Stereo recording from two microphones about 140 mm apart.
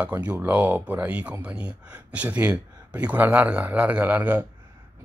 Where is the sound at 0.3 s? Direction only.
10° right (ahead or behind).